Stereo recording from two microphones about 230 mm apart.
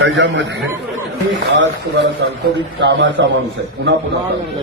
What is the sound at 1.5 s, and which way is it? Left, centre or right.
Music, right.